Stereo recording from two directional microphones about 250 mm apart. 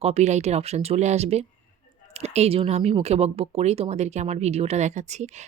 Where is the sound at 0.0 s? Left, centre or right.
Right.